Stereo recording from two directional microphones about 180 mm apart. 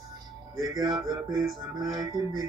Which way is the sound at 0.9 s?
25° right (ahead or behind).